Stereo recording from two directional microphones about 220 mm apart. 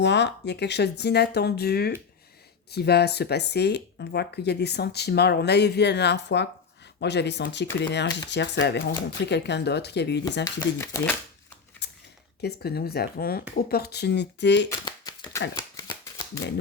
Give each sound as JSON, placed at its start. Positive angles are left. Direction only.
{"t": 0.0, "sound": "speech", "side_deg": 50}
{"t": 10.4, "sound": "speech", "side_deg": 15}
{"t": 11.8, "sound": "a sound", "side_deg": 50}
{"t": 12.4, "sound": "speech", "side_deg": 45}
{"t": 14.8, "sound": "shuffling cards", "side_deg": 20}